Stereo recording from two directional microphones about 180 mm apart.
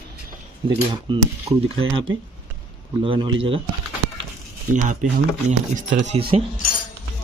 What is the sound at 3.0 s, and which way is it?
Speech, 30° right (ahead or behind).